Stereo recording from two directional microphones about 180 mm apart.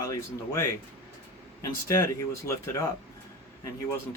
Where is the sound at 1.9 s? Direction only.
15° left (ahead or behind).